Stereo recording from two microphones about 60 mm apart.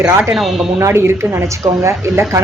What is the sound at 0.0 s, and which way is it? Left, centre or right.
Speech, right.